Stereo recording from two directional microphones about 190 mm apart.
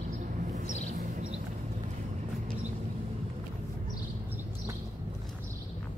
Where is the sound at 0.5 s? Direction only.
40° right (ahead or behind).